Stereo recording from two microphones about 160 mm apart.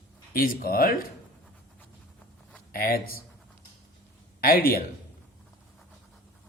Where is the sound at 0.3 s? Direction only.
70° left (ahead or behind).